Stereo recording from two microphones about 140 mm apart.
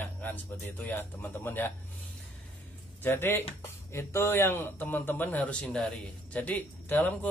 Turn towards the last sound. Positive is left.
turn(degrees=10)  # may be behind; listen again after turning